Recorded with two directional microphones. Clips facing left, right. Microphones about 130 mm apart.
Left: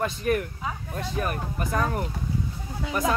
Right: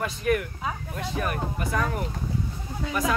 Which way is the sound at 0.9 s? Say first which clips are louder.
Left 1 dB; 35° left (ahead or behind).